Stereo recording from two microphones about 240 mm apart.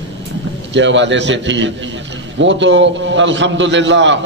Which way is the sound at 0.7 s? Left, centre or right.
Right.